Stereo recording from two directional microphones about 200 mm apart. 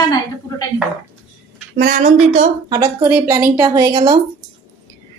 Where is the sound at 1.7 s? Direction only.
45° right (ahead or behind).